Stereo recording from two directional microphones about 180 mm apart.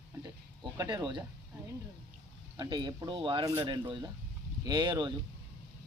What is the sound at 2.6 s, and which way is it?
Speech, 25° right (ahead or behind).